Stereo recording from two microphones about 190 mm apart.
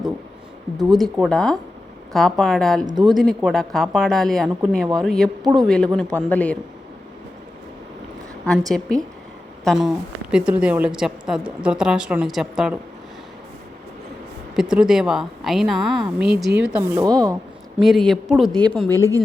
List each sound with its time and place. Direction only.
0.8 s a woman's voice: centre (ahead or behind)
2.8 s speech: 25° right (ahead or behind)
3.2 s a woman's voice: centre (ahead or behind)
8.4 s a woman's voice: centre (ahead or behind)
14.5 s a woman's voice: 5° right (ahead or behind)
16.6 s speech: 15° right (ahead or behind)
17.7 s a woman's voice: centre (ahead or behind)